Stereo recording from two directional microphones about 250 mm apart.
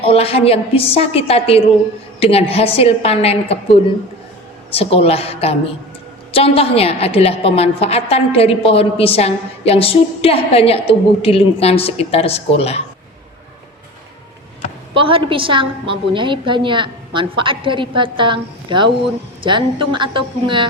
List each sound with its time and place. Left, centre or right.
0.0 s a woman's voice: left
4.7 s a woman's voice: left
14.9 s a woman's voice: right